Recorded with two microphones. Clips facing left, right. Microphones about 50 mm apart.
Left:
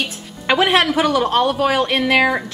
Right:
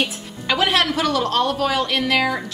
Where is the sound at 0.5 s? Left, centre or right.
Left.